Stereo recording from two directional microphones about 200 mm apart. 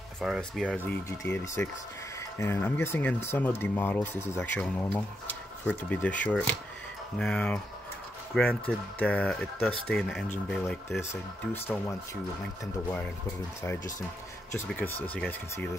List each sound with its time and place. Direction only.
0.2 s speech: centre (ahead or behind)
15.0 s speech: 10° left (ahead or behind)